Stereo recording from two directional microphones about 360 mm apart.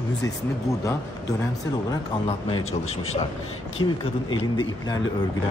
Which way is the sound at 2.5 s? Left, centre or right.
Centre.